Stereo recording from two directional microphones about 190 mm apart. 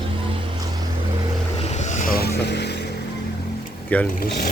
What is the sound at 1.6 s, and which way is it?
Vehicle, 35° left (ahead or behind).